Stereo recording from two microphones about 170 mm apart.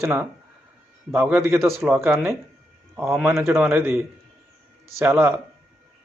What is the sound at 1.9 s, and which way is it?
Speech, 15° right (ahead or behind).